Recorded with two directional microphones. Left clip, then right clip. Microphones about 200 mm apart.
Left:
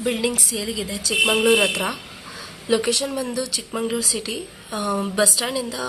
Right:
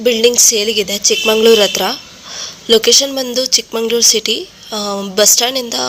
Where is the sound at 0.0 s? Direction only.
30° right (ahead or behind).